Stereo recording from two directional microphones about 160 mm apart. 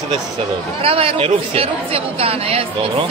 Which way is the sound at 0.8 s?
35° right (ahead or behind).